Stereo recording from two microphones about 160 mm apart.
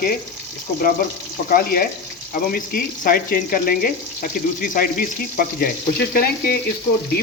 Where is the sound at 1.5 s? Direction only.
70° left (ahead or behind).